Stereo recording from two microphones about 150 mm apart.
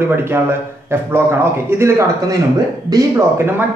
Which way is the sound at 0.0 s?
15° right (ahead or behind).